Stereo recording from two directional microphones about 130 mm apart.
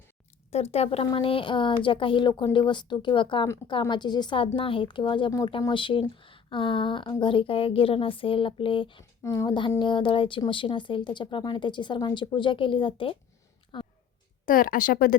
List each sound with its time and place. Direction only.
0.5 s speech: 55° left (ahead or behind)
9.2 s speech: 25° left (ahead or behind)
9.6 s speech: 40° left (ahead or behind)
14.4 s a woman's voice: 90° left